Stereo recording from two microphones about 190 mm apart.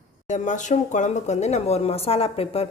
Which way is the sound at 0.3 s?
40° left (ahead or behind).